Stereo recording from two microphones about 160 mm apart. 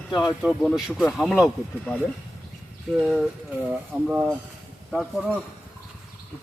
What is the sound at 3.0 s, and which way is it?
Speech, centre (ahead or behind).